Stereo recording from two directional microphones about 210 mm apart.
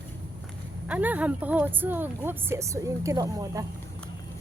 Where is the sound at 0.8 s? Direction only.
5° right (ahead or behind).